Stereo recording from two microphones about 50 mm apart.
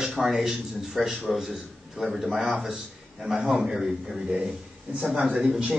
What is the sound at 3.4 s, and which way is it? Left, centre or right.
Speech, right.